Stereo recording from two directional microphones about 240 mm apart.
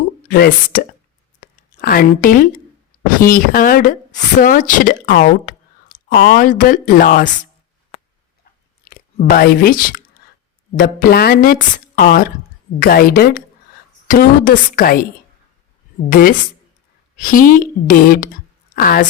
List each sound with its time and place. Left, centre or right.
0.3 s speech: left
8.8 s speech: left
10.2 s a sound: left
10.8 s speech: left
16.0 s speech: left